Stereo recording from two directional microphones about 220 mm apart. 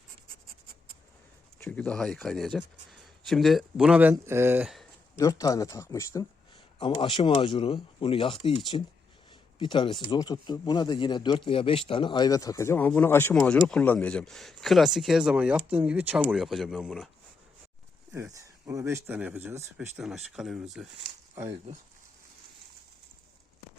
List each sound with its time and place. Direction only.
1.5 s speech: 10° left (ahead or behind)
5.1 s speech: 15° left (ahead or behind); by 17.1 s centre (ahead or behind)
18.1 s speech: 10° right (ahead or behind)